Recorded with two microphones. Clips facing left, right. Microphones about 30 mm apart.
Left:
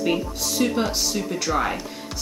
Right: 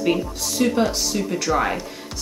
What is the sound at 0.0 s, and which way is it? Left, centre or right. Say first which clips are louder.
Speech: right 2 dB; centre.